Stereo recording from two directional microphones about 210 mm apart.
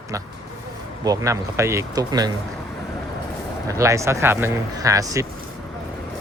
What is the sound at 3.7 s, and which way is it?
Speech, 15° right (ahead or behind).